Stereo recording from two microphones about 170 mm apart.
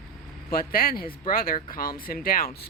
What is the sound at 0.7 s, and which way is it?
Speech, 60° left (ahead or behind).